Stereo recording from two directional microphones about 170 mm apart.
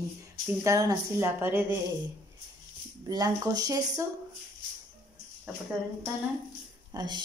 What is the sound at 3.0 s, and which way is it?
A woman's voice, 25° right (ahead or behind).